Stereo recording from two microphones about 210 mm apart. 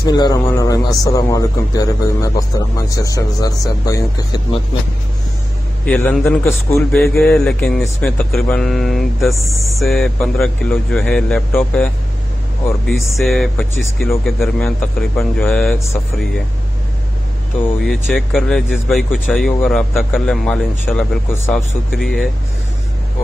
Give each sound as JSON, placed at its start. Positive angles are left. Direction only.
{"t": 0.0, "sound": "speech", "side_deg": 20}
{"t": 5.9, "sound": "speech", "side_deg": 10}
{"t": 13.2, "sound": "speech", "side_deg": 0}
{"t": 17.8, "sound": "speech", "side_deg": 5}